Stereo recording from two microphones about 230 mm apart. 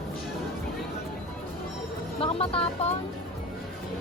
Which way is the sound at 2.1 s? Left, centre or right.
Left.